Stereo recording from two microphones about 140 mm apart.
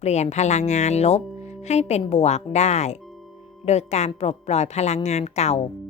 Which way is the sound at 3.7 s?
50° left (ahead or behind).